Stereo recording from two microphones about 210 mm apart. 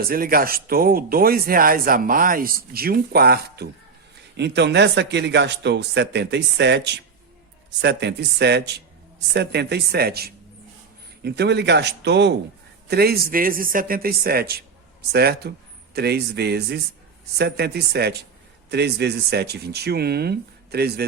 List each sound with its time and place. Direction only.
0.1 s speech: 45° right (ahead or behind)